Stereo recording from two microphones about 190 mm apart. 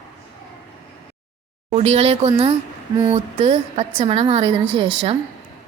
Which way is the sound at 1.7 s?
35° right (ahead or behind).